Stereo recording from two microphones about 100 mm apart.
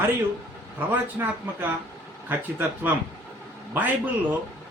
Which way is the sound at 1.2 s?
25° right (ahead or behind).